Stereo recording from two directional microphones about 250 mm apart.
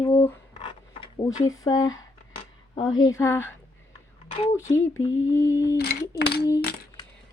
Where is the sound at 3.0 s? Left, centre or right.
Centre.